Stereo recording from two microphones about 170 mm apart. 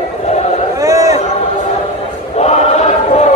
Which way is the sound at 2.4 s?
40° left (ahead or behind).